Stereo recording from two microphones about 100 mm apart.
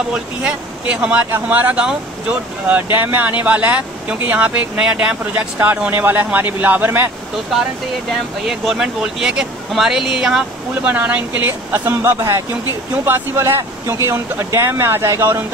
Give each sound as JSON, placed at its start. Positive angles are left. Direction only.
{"t": 0.1, "sound": "speech", "side_deg": -10}
{"t": 8.5, "sound": "speech", "side_deg": -5}